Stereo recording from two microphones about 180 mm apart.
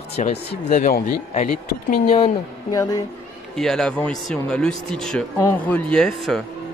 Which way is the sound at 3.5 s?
5° left (ahead or behind).